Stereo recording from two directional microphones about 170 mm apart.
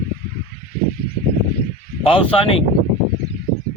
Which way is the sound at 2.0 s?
30° left (ahead or behind).